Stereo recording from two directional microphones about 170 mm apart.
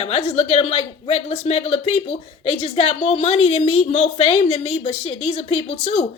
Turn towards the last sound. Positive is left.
turn(degrees=35)  # may be behind; listen again after turning